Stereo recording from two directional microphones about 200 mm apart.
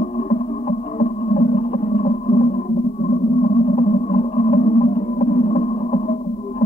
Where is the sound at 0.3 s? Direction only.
35° left (ahead or behind).